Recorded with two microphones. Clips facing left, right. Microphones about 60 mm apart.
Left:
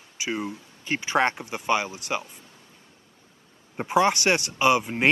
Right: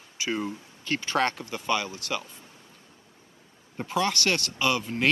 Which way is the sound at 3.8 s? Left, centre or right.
Left.